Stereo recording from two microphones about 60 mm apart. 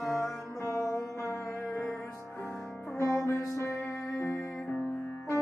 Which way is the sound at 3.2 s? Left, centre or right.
Left.